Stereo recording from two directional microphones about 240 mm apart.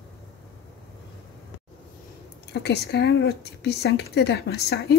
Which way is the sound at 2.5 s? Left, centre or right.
Left.